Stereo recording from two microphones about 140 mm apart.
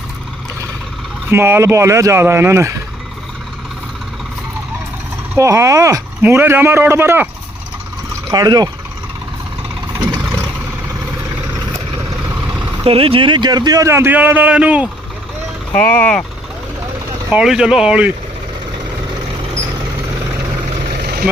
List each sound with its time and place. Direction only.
1.3 s a man's voice: 15° right (ahead or behind)
5.3 s speech: 20° right (ahead or behind)
8.3 s a man's voice: 30° right (ahead or behind)
12.8 s a man's voice: 45° right (ahead or behind); by 14.8 s 10° right (ahead or behind)
15.7 s speech: 10° left (ahead or behind)
17.3 s speech: 5° right (ahead or behind)